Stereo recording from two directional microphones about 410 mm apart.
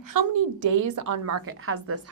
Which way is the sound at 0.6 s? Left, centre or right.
Right.